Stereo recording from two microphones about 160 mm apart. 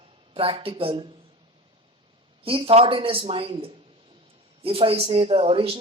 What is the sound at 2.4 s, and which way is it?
Speech, 35° right (ahead or behind).